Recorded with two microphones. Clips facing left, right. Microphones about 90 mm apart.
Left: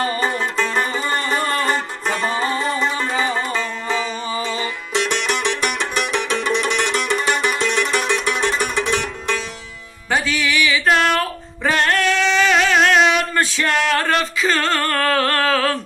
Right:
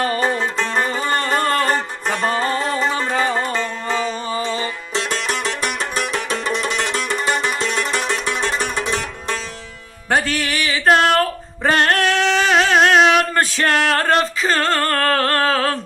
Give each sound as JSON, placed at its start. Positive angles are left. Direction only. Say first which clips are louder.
{"t": 1.0, "sound": "music", "louder": "right 2 dB", "side_deg": -55}
{"t": 3.4, "sound": "music", "louder": "right 1 dB", "side_deg": 5}
{"t": 3.8, "sound": "music", "louder": "right 1 dB", "side_deg": -50}
{"t": 4.4, "sound": "music", "louder": "right 1 dB", "side_deg": -35}
{"t": 10.1, "sound": "music", "louder": "right 1 dB", "side_deg": -55}